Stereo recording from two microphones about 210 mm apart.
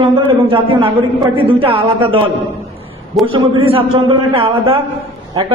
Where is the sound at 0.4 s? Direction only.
25° right (ahead or behind).